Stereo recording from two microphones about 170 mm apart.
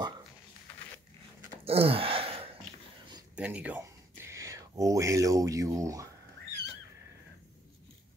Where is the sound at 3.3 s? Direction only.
10° right (ahead or behind).